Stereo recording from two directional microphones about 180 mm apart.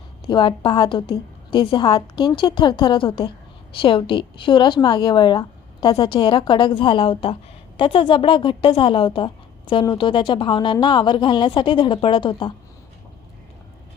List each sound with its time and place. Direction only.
0.3 s a woman's voice: 25° left (ahead or behind)